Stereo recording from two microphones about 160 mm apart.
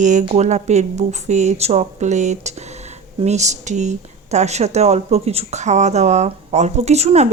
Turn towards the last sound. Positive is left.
turn(degrees=-45)  # may be behind; listen again after turning